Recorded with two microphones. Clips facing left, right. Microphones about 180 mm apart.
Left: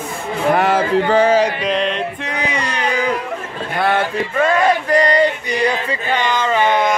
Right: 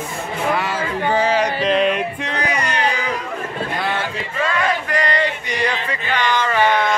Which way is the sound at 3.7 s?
60° left (ahead or behind).